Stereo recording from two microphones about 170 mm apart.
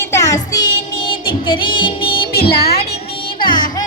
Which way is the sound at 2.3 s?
65° left (ahead or behind).